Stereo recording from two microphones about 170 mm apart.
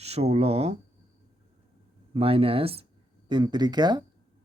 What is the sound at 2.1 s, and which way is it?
A man's voice, 35° right (ahead or behind).